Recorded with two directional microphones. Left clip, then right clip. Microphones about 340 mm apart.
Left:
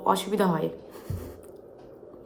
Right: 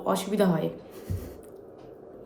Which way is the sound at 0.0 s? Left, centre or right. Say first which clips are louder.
Left 2 dB; centre.